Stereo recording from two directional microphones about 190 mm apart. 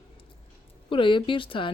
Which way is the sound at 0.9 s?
25° left (ahead or behind).